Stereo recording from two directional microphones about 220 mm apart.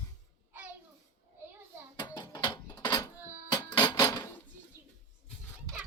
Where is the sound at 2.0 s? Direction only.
20° left (ahead or behind).